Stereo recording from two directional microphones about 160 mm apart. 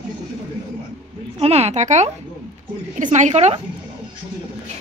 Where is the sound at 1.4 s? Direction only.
40° right (ahead or behind).